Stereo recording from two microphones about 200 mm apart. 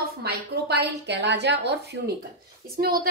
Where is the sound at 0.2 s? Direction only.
50° right (ahead or behind).